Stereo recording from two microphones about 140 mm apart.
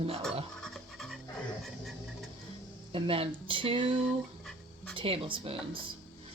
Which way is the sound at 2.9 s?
40° right (ahead or behind).